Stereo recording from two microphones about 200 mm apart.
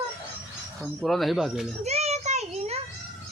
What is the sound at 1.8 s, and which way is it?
Child singing, 30° right (ahead or behind).